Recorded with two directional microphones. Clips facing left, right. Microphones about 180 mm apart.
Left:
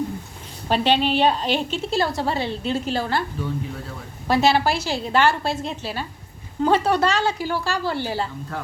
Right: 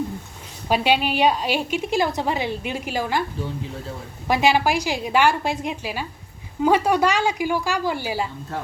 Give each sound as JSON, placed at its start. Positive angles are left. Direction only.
{"t": 0.7, "sound": "a woman's voice", "side_deg": -10}
{"t": 4.3, "sound": "a woman's voice", "side_deg": -15}